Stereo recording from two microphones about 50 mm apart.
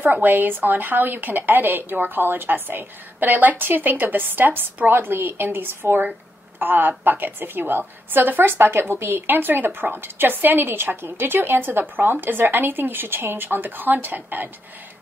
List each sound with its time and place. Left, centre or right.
0.0 s a woman's voice: right